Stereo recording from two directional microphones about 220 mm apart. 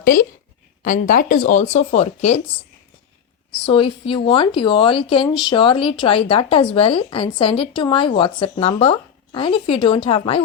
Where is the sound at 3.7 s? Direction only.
25° left (ahead or behind).